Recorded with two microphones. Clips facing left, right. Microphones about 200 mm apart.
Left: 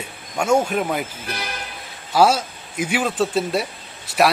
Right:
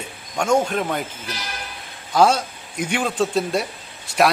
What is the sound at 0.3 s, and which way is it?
Speech, 10° left (ahead or behind).